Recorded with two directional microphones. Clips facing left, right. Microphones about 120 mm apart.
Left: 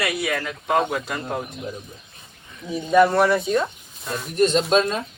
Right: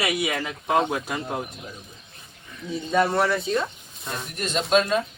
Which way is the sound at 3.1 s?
Centre (ahead or behind).